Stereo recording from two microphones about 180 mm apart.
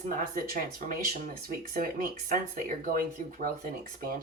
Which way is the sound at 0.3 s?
55° right (ahead or behind).